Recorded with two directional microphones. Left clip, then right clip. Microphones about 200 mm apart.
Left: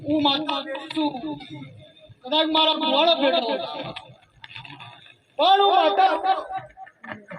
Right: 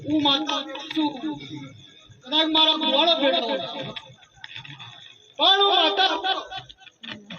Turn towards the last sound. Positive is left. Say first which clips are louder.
# left 3 dB
turn(degrees=35)  # may be behind; listen again after turning